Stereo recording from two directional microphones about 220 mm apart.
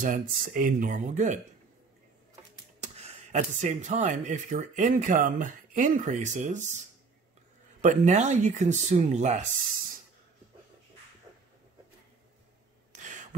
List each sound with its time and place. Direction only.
0.0 s speech: 35° right (ahead or behind)
2.8 s speech: 30° right (ahead or behind)
7.8 s speech: 35° right (ahead or behind)
13.0 s a sound: 35° right (ahead or behind)